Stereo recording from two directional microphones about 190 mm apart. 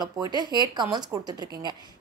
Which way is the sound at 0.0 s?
20° right (ahead or behind).